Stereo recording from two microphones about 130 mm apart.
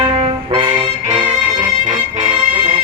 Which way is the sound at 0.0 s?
45° right (ahead or behind).